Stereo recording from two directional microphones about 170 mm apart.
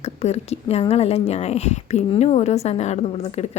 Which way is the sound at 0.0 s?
40° left (ahead or behind).